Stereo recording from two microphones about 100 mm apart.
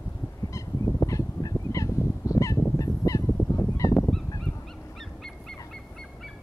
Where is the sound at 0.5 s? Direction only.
35° left (ahead or behind).